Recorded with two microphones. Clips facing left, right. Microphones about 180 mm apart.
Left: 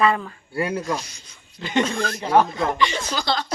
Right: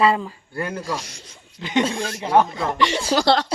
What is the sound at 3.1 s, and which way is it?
Speech, 70° right (ahead or behind).